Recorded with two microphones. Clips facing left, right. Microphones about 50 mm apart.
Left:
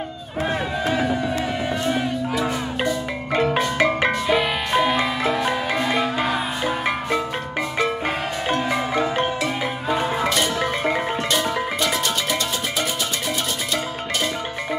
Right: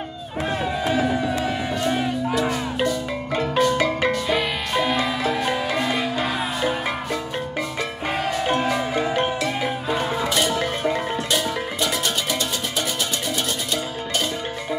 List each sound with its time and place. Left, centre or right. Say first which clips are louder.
1.9 s music: right 2 dB; centre
3.5 s music: even; left
4.3 s music: left 3 dB; centre
9.1 s music: even; left